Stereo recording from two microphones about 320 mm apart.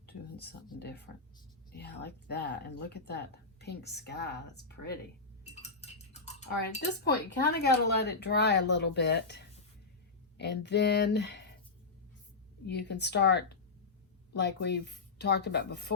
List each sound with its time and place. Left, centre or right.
0.0 s speech: left
5.6 s a sound: left
6.8 s speech: left
12.6 s speech: left